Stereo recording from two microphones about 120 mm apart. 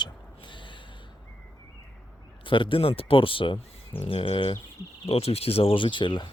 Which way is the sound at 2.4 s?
45° left (ahead or behind).